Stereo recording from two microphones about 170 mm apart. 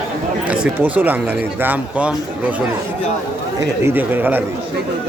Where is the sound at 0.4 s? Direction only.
5° right (ahead or behind).